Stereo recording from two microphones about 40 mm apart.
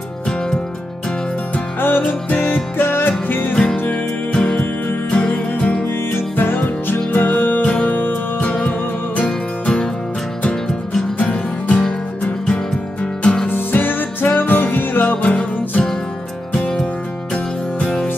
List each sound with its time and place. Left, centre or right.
1.8 s music: left
2.2 s music: left
2.8 s music: left
3.9 s music: left
6.3 s music: left
7.6 s music: left
7.9 s music: left
8.4 s music: left
10.7 s music: centre
11.1 s music: left
13.0 s music: left
13.5 s music: left
17.3 s music: centre